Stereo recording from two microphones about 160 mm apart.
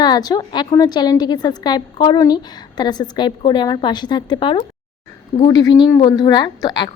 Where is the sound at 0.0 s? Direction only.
25° left (ahead or behind).